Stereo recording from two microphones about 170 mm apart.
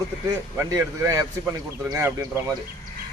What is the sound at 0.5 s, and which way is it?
Speech, 20° right (ahead or behind).